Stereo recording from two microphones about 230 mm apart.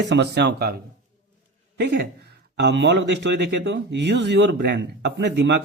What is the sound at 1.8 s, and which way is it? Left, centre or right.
A man's voice, right.